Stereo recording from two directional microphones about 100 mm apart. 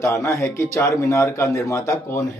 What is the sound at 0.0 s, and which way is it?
Speech, 30° left (ahead or behind).